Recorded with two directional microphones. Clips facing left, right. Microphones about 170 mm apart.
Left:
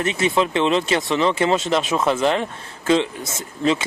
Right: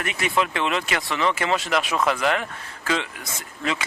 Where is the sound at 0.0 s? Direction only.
25° left (ahead or behind).